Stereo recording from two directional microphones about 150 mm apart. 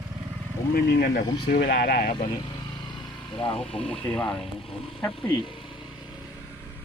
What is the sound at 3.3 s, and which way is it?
Speech, 35° left (ahead or behind).